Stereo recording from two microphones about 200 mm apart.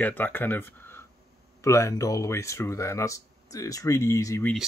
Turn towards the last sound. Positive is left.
turn(degrees=15)  # may be behind; listen again after turning